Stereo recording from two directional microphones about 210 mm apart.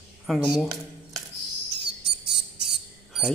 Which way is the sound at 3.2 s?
Centre (ahead or behind).